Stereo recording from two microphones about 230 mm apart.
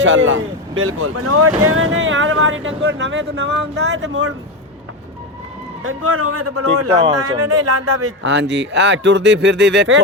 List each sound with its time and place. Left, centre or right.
0.0 s speech: right
5.8 s a man's voice: right
6.9 s speech: centre
7.4 s speech: right
8.2 s speech: right